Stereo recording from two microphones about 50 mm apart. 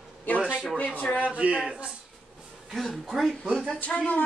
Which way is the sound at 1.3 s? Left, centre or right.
Right.